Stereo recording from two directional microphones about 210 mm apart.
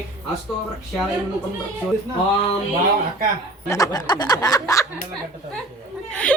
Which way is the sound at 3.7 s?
15° left (ahead or behind).